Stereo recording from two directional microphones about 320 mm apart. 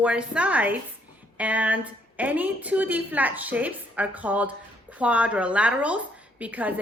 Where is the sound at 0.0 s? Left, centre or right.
Centre.